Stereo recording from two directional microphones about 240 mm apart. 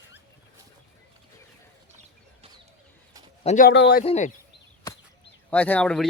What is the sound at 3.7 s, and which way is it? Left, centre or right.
Speech, left.